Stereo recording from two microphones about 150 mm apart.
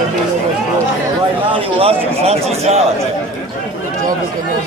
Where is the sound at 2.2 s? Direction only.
45° right (ahead or behind).